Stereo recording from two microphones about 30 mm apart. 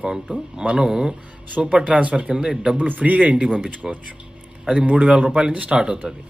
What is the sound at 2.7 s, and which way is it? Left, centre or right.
A man's voice, right.